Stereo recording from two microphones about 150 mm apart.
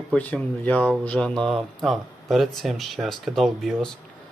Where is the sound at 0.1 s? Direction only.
5° left (ahead or behind).